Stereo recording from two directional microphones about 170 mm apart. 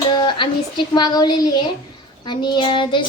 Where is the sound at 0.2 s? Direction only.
25° left (ahead or behind).